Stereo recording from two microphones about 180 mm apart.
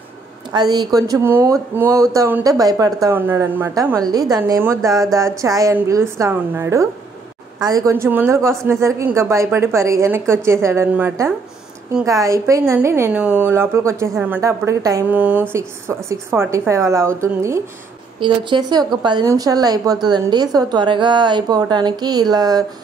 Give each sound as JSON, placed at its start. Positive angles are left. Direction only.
{"t": 0.5, "sound": "speech", "side_deg": -25}
{"t": 18.2, "sound": "speech", "side_deg": -25}